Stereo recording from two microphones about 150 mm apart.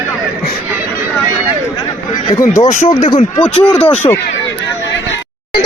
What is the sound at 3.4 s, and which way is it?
Speech, 5° left (ahead or behind).